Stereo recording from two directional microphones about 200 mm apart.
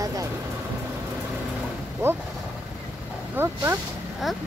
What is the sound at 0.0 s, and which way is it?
Vehicle, 15° right (ahead or behind).